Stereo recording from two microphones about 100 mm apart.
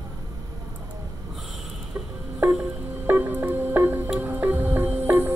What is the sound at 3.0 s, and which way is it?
Music, 20° right (ahead or behind).